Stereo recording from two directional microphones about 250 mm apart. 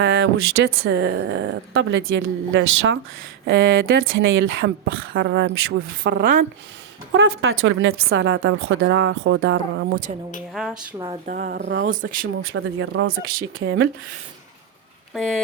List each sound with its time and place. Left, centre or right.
0.0 s speech: right
7.1 s speech: right
10.5 s speech: centre
10.9 s speech: centre
11.3 s speech: right
11.9 s speech: right
12.4 s speech: right
15.1 s speech: centre